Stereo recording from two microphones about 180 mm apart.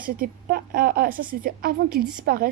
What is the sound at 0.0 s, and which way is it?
A woman's voice, 55° right (ahead or behind).